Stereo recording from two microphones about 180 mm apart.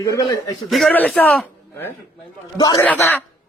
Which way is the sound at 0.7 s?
5° left (ahead or behind).